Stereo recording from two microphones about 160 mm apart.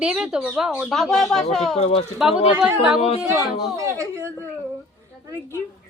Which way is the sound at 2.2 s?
5° right (ahead or behind).